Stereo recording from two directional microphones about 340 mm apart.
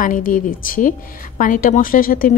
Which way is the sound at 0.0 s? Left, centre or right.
Left.